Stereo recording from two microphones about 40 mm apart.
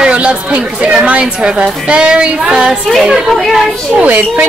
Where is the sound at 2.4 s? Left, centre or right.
Centre.